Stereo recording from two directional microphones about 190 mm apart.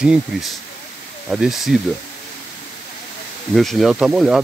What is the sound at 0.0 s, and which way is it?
Speech, 5° right (ahead or behind).